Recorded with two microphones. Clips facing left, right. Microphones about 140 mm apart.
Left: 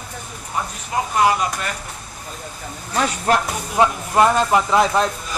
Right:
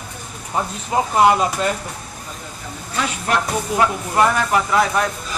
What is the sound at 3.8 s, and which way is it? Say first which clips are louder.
Speech: left 3 dB; 25° left (ahead or behind).